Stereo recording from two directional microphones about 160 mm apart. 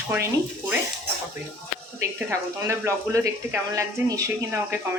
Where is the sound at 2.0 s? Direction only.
20° right (ahead or behind).